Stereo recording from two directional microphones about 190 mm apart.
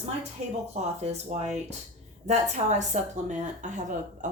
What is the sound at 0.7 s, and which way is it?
A woman's voice, 35° right (ahead or behind).